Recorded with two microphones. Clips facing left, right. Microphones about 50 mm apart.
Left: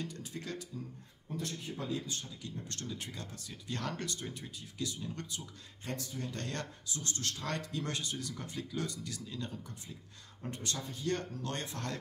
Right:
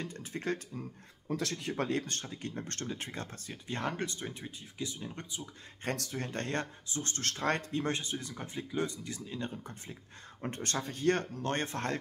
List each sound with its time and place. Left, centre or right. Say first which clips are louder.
0.0 s speech: right 4 dB; right
1.2 s speech: right 5 dB; right
5.9 s speech: right 4 dB; right
6.3 s speech: right 5 dB; right